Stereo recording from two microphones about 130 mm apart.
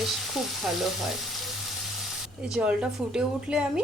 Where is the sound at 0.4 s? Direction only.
Centre (ahead or behind).